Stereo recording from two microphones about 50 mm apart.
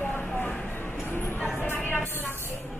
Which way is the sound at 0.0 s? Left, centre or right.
Left.